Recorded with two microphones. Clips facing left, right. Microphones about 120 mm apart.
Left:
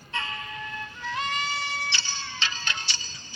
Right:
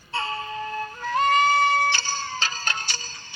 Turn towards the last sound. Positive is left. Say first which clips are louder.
# right 4 dB
turn(degrees=-45)  # may be behind; listen again after turning